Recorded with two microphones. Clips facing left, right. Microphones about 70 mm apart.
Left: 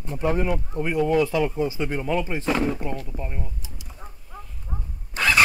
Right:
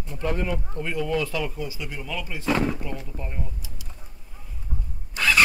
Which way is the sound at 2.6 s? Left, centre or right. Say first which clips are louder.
Left 3 dB; centre.